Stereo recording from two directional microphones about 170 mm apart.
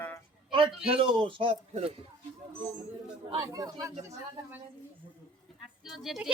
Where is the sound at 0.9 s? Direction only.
30° right (ahead or behind).